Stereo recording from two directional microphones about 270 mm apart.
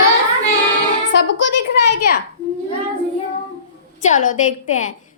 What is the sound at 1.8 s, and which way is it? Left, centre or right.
Speech, left.